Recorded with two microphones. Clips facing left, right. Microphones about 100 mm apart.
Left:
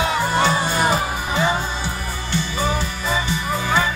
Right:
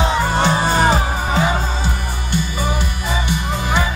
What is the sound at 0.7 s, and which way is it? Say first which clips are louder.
Music: right 3 dB; 35° right (ahead or behind).